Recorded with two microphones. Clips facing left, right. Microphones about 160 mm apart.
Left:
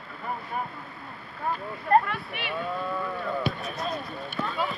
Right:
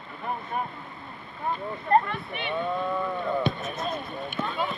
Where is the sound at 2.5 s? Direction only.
20° right (ahead or behind).